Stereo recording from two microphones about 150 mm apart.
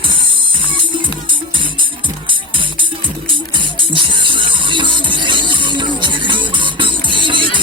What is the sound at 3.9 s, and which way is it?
Music, 35° right (ahead or behind).